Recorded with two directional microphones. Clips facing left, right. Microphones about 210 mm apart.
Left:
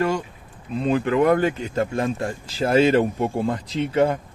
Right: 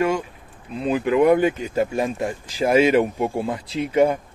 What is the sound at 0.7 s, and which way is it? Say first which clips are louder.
Speech: right 1 dB; 10° right (ahead or behind).